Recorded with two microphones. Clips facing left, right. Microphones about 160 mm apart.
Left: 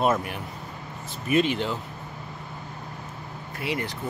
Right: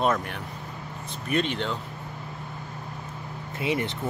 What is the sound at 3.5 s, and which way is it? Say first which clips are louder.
Speech: right 3 dB; 20° right (ahead or behind).